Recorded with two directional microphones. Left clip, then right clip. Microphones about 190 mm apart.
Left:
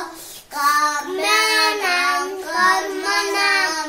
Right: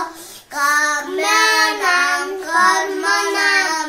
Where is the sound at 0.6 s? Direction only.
20° right (ahead or behind).